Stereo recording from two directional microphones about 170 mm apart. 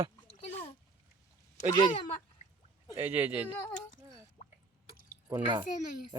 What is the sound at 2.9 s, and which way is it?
Speech, 10° right (ahead or behind).